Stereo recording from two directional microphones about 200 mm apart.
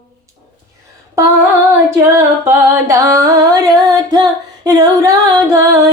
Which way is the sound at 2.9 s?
15° right (ahead or behind).